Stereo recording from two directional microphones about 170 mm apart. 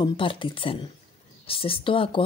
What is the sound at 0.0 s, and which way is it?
Speech, 30° left (ahead or behind).